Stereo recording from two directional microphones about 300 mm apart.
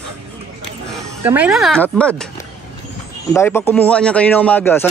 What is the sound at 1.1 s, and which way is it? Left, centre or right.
Speech, centre.